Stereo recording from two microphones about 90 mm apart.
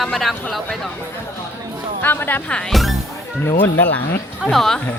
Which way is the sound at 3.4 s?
20° left (ahead or behind).